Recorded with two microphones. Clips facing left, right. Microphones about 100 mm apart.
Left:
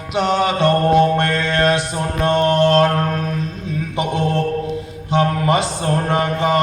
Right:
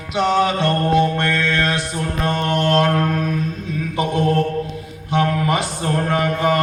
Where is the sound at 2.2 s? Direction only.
30° left (ahead or behind).